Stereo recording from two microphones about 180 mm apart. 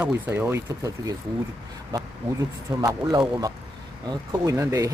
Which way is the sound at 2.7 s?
25° right (ahead or behind).